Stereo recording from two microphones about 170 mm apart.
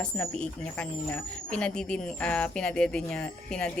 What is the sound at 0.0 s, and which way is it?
Speech, 5° left (ahead or behind).